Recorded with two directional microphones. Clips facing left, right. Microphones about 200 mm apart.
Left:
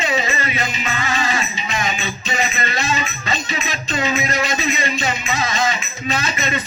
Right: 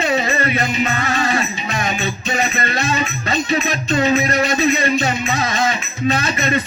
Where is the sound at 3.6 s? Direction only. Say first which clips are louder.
Right 6 dB; 55° right (ahead or behind).